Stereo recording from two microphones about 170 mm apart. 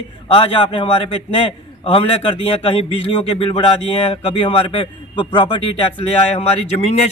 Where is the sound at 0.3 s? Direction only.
30° left (ahead or behind).